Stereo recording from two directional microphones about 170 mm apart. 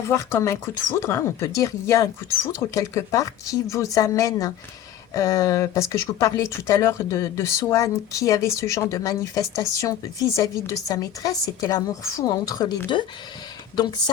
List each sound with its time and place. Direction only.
0.0 s speech: 15° left (ahead or behind)